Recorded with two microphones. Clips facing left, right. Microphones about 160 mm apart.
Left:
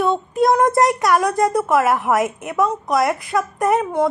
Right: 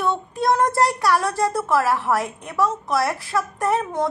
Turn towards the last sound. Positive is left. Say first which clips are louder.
# left 4 dB
turn(degrees=15)  # may be behind; listen again after turning